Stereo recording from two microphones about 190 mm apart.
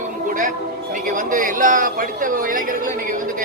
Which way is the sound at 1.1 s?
45° right (ahead or behind).